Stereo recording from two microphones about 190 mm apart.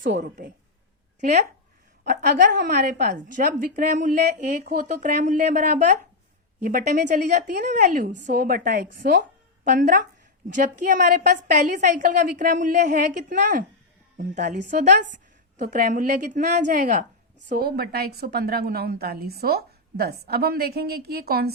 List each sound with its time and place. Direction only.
0.1 s a woman's voice: 55° right (ahead or behind)
1.2 s a woman's voice: 40° right (ahead or behind)
2.0 s a woman's voice: 55° right (ahead or behind)
9.6 s a woman's voice: 45° right (ahead or behind)
17.6 s a woman's voice: 55° right (ahead or behind)